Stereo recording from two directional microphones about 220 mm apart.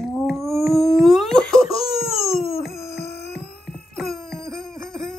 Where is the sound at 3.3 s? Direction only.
Centre (ahead or behind).